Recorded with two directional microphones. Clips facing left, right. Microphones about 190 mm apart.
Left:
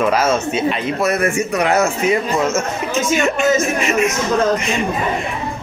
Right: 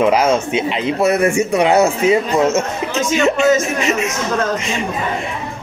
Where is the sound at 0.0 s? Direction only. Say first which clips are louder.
Right 2 dB; 15° right (ahead or behind).